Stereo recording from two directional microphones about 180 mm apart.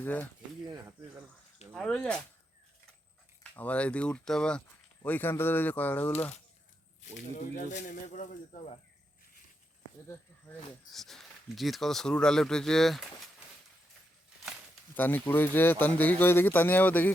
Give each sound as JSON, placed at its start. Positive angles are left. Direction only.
{"t": 0.0, "sound": "speech", "side_deg": 10}
{"t": 1.7, "sound": "speech", "side_deg": 5}
{"t": 3.5, "sound": "speech", "side_deg": 10}
{"t": 7.3, "sound": "speech", "side_deg": 40}
{"t": 10.9, "sound": "speech", "side_deg": 0}
{"t": 14.9, "sound": "speech", "side_deg": 10}